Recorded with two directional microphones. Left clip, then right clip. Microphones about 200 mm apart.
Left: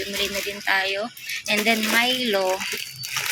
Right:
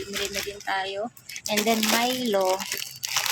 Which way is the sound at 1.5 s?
10° right (ahead or behind).